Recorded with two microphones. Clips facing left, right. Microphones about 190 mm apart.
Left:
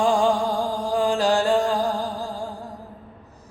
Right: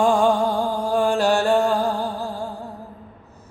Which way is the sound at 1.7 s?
15° left (ahead or behind).